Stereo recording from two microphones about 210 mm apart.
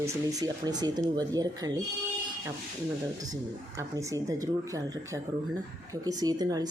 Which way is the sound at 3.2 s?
15° right (ahead or behind).